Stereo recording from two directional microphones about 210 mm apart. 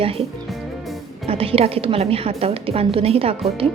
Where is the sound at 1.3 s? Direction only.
25° right (ahead or behind).